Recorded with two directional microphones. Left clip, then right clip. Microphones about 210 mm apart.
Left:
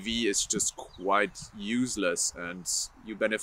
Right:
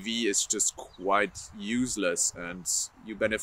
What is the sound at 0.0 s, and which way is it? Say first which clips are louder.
Speech: even; centre (ahead or behind).